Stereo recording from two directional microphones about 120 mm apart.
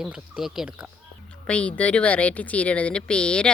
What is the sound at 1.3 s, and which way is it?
Speech, 10° left (ahead or behind).